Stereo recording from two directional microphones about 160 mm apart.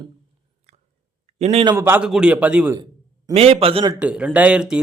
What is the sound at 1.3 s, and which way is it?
Speech, 40° right (ahead or behind).